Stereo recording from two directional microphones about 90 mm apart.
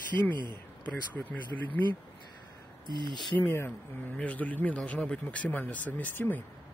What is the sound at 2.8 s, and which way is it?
Speech, 55° right (ahead or behind).